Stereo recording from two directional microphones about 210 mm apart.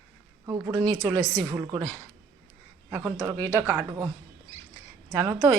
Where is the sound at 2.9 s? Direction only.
15° right (ahead or behind).